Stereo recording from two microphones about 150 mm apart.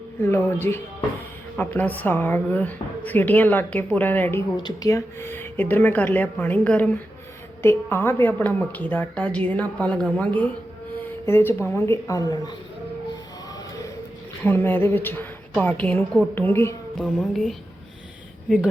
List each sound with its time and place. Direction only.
0.2 s a woman's voice: 15° left (ahead or behind)
14.4 s speech: 15° left (ahead or behind)
17.0 s speech: centre (ahead or behind)